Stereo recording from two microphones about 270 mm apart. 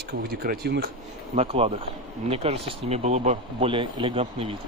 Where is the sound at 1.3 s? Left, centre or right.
Right.